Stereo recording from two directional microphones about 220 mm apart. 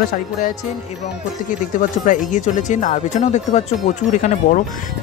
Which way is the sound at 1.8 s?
35° left (ahead or behind).